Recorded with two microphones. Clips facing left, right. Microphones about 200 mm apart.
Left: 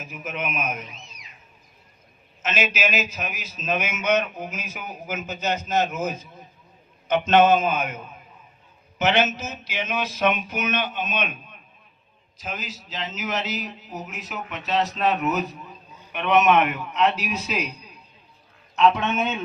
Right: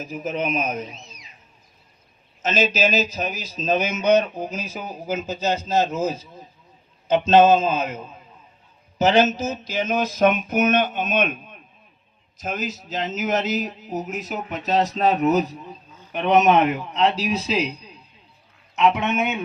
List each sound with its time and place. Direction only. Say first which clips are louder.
0.0 s a man's voice: right 6 dB; 35° right (ahead or behind)
2.4 s a man's voice: right 5 dB; 35° right (ahead or behind)
9.0 s a sound: right 4 dB; 35° right (ahead or behind)
12.4 s a sound: right 6 dB; 45° right (ahead or behind)
14.9 s a man's voice: right 5 dB; 35° right (ahead or behind)
18.8 s a man's voice: even; 20° right (ahead or behind)